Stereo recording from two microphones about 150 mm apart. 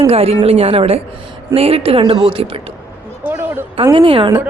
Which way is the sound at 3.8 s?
35° right (ahead or behind).